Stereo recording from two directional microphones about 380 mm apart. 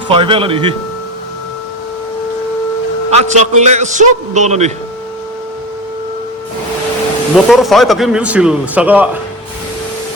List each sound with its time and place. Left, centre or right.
0.1 s a man's voice: centre
3.1 s a man's voice: centre
7.3 s a man's voice: centre